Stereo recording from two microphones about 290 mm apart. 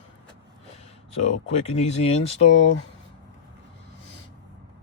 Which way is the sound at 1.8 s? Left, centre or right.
Left.